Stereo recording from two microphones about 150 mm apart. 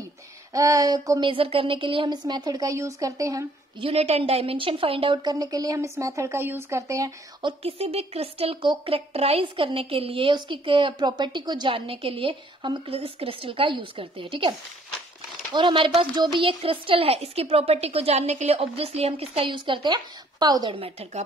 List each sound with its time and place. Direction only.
0.5 s a woman's voice: 25° right (ahead or behind)
1.3 s a woman's voice: 40° right (ahead or behind); by 3.4 s 20° right (ahead or behind)
3.8 s a woman's voice: 45° right (ahead or behind); by 7.1 s 20° right (ahead or behind)
7.4 s speech: 40° right (ahead or behind)
15.5 s speech: 35° right (ahead or behind)